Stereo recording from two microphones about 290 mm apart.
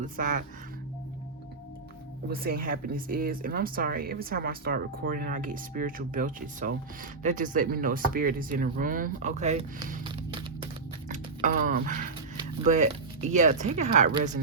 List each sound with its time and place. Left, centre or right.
0.0 s speech: right
2.3 s speech: right